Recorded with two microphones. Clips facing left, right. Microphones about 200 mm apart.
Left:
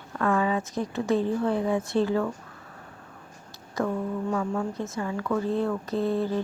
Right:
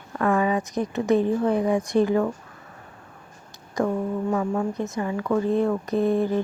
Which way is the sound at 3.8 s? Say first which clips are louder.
Right 3 dB; 20° right (ahead or behind).